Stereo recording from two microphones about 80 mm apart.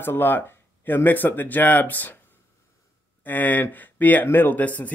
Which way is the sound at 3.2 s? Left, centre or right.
Left.